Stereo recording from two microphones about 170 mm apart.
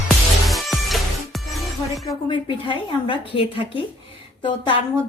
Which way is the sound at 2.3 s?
30° left (ahead or behind).